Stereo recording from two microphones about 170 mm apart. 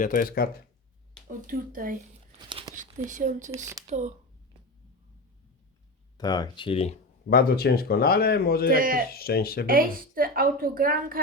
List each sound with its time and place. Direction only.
0.0 s speech: 50° left (ahead or behind)
1.4 s a woman's voice: 55° right (ahead or behind)
2.4 s a sound: 25° right (ahead or behind)
2.8 s speech: 45° right (ahead or behind)
6.1 s speech: 25° left (ahead or behind)
7.3 s speech: 60° left (ahead or behind)
8.7 s a woman's voice: 55° right (ahead or behind)
9.0 s speech: 65° left (ahead or behind)
9.6 s a woman's voice: 55° right (ahead or behind)